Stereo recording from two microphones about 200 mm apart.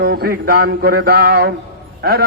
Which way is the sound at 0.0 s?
50° right (ahead or behind).